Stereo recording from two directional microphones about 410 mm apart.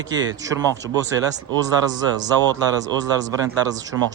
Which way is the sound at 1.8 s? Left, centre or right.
Centre.